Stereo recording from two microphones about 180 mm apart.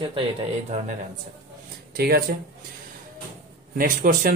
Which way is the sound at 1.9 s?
60° right (ahead or behind).